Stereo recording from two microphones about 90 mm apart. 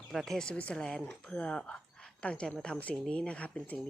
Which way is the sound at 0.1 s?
5° left (ahead or behind).